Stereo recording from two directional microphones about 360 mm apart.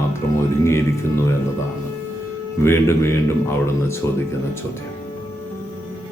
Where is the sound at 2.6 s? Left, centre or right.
Centre.